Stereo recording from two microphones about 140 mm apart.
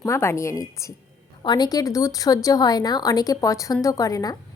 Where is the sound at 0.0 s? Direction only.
20° left (ahead or behind).